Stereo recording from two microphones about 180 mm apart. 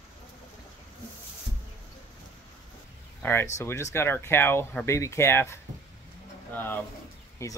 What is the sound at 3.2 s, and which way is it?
Speech, 15° left (ahead or behind).